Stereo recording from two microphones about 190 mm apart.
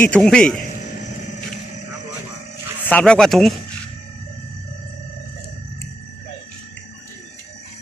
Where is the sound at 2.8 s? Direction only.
5° left (ahead or behind).